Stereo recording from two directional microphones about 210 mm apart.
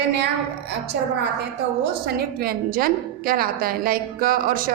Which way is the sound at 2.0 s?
45° right (ahead or behind).